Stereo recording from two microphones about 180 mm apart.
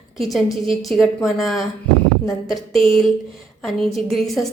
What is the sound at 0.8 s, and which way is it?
Speech, centre (ahead or behind).